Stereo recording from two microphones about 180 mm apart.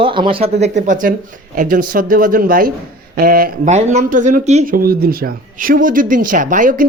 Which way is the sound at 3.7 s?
40° right (ahead or behind).